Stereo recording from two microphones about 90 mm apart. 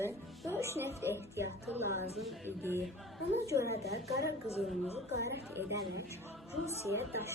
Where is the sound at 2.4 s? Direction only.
25° right (ahead or behind).